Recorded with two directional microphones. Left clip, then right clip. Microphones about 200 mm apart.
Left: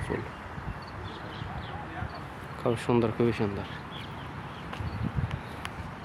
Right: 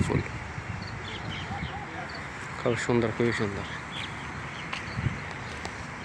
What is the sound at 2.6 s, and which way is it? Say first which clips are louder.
Speech: even; 15° left (ahead or behind).